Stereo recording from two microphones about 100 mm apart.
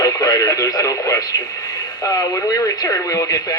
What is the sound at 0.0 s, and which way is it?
Speech, 40° left (ahead or behind).